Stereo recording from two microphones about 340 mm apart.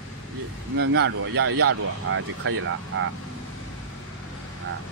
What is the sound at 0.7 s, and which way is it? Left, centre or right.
Speech, right.